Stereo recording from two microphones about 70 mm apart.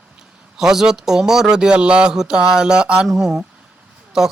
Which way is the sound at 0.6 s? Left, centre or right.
Centre.